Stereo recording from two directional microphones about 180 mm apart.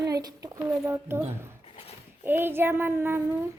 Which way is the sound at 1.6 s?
30° left (ahead or behind).